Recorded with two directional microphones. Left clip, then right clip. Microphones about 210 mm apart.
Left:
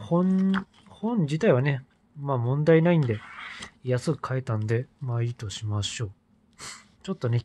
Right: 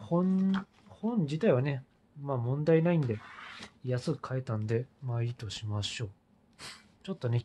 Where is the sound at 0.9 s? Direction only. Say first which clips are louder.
Left 5 dB; 25° left (ahead or behind).